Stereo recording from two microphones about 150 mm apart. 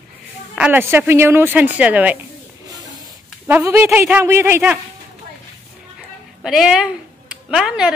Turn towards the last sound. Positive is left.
turn(degrees=-5)  # may be behind; listen again after turning